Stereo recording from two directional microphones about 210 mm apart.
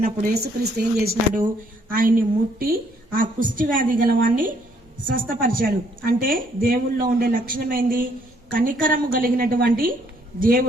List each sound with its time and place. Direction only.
0.4 s a woman's voice: 50° right (ahead or behind)